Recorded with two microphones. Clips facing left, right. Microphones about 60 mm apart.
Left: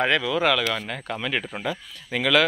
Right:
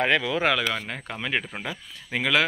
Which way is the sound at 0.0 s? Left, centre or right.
Right.